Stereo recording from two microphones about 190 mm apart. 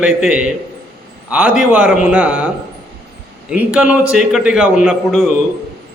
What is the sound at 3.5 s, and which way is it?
A man's voice, 5° right (ahead or behind).